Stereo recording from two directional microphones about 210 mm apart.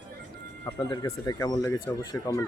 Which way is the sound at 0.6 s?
15° left (ahead or behind).